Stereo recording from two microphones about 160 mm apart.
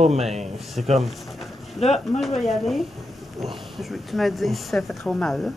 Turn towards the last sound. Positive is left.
turn(degrees=0)  # may be behind; listen again after turning